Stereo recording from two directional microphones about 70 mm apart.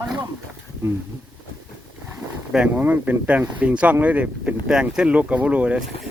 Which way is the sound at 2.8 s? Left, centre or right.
Right.